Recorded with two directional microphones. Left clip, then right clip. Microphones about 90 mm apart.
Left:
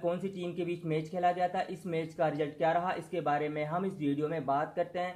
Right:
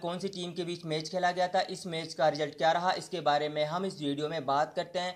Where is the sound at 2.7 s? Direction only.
20° right (ahead or behind).